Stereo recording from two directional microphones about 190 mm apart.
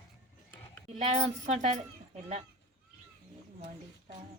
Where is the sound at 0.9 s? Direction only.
35° right (ahead or behind).